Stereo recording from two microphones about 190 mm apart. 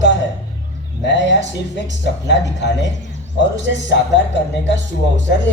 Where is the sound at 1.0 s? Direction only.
65° left (ahead or behind).